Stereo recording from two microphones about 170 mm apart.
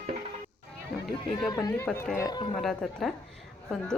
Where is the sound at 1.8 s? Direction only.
5° left (ahead or behind).